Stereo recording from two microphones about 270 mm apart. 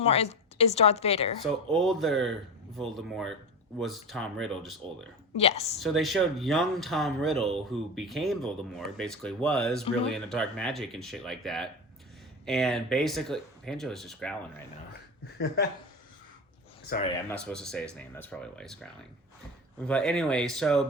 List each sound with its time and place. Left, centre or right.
0.0 s a woman's voice: left
1.7 s speech: centre
5.4 s a woman's voice: left
5.8 s speech: centre
15.4 s speech: left
17.2 s speech: centre